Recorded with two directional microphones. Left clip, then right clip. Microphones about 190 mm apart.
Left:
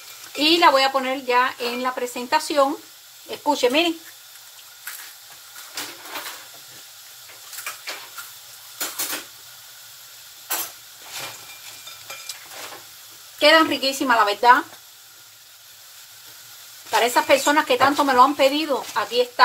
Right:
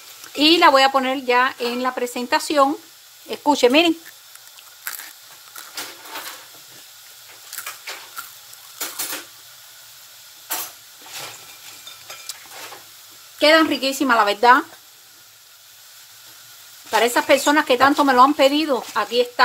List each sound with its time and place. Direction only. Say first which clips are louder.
0.4 s speech: right 3 dB; 45° right (ahead or behind)
3.3 s speech: right 4 dB; 50° right (ahead or behind)
13.4 s speech: right 1 dB; 35° right (ahead or behind)
16.9 s speech: right 1 dB; 40° right (ahead or behind)